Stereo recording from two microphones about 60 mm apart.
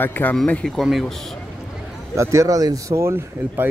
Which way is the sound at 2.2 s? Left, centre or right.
Right.